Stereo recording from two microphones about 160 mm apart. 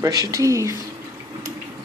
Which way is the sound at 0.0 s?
20° right (ahead or behind).